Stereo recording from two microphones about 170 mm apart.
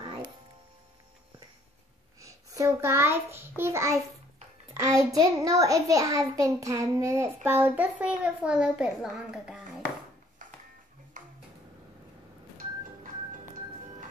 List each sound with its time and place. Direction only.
2.2 s child singing: 20° right (ahead or behind)
4.7 s a child's voice: 20° right (ahead or behind)
11.2 s a sound: 50° right (ahead or behind)